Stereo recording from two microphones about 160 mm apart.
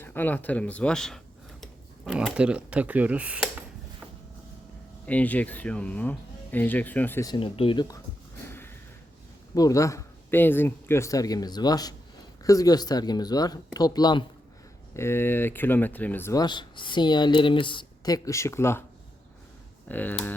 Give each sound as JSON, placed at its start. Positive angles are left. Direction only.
{"t": 0.0, "sound": "speech", "side_deg": 10}
{"t": 5.0, "sound": "speech", "side_deg": 10}
{"t": 7.3, "sound": "speech", "side_deg": 35}
{"t": 8.4, "sound": "snort", "side_deg": 15}
{"t": 9.6, "sound": "speech", "side_deg": 20}
{"t": 14.9, "sound": "speech", "side_deg": 15}
{"t": 19.9, "sound": "speech", "side_deg": 10}